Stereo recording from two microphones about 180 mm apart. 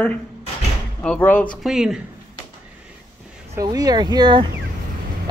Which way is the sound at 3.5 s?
20° right (ahead or behind).